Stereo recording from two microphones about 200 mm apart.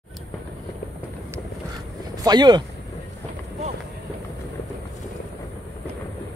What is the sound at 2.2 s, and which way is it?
Speech, 20° right (ahead or behind).